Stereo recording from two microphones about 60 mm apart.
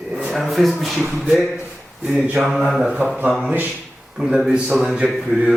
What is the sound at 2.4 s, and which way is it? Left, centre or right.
Speech, centre.